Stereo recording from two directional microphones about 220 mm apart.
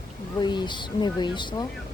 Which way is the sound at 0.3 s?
20° left (ahead or behind).